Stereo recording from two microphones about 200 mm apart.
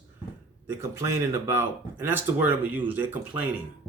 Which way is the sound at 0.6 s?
15° right (ahead or behind).